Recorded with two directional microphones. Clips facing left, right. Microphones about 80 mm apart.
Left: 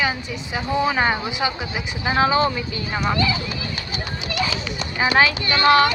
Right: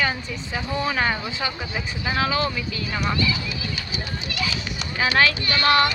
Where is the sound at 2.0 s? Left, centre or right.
Left.